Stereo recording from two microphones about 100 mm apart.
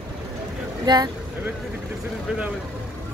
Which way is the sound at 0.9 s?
50° right (ahead or behind).